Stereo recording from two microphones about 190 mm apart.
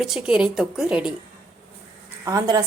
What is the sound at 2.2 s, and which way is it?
Speech, 20° right (ahead or behind).